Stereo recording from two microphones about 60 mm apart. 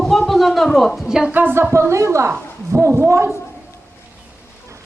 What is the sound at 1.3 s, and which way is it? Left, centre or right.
Speech, right.